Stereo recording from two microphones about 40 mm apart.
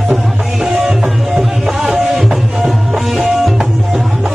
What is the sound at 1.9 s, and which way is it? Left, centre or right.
Music, centre.